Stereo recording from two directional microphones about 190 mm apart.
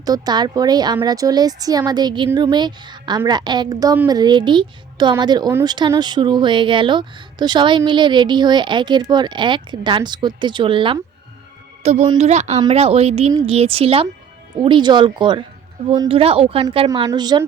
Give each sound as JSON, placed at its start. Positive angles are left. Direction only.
{"t": 0.0, "sound": "speech", "side_deg": -20}